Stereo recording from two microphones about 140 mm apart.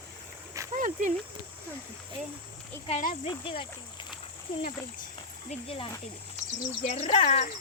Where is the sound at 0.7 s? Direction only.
65° right (ahead or behind).